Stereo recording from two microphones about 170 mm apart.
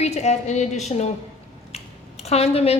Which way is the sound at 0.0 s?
40° left (ahead or behind).